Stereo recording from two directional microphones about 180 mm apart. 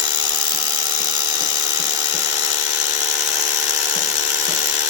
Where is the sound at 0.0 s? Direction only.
25° right (ahead or behind).